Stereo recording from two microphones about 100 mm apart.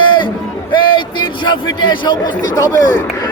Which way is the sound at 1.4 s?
45° left (ahead or behind).